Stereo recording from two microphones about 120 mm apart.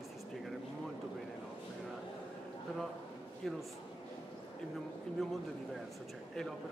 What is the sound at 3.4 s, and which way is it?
Speech, centre (ahead or behind).